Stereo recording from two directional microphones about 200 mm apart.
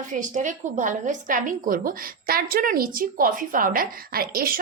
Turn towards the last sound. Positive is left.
turn(degrees=-45)  # may be behind; listen again after turning